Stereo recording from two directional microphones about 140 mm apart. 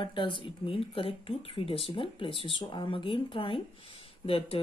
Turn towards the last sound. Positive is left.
turn(degrees=40)  # may be behind; listen again after turning